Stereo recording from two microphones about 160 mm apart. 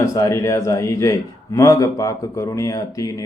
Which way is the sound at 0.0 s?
20° left (ahead or behind).